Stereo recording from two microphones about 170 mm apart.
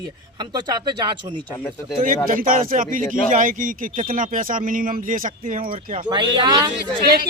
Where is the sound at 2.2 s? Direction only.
55° right (ahead or behind).